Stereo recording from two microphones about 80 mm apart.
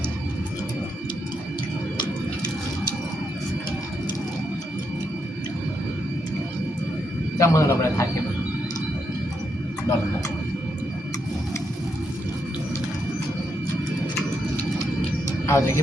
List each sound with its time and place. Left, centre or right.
7.3 s a man's voice: left
15.4 s speech: left